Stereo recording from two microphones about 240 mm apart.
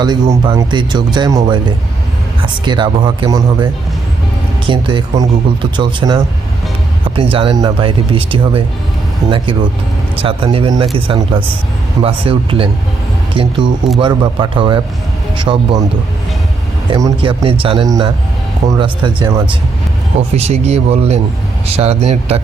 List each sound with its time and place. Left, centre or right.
0.0 s speech: centre
16.9 s speech: right